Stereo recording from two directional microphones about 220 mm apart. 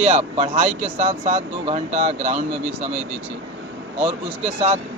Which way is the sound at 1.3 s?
30° right (ahead or behind).